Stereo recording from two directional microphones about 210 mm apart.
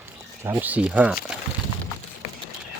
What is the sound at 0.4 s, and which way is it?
Speech, 10° right (ahead or behind).